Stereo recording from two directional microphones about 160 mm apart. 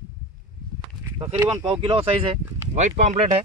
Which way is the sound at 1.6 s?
30° right (ahead or behind).